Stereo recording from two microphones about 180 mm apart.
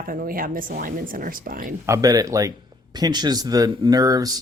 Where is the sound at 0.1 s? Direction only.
50° right (ahead or behind).